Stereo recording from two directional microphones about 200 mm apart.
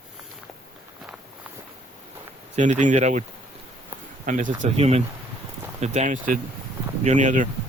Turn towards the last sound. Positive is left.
turn(degrees=-40)  # may be behind; listen again after turning